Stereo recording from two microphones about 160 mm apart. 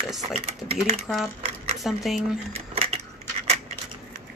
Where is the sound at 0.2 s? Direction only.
40° right (ahead or behind).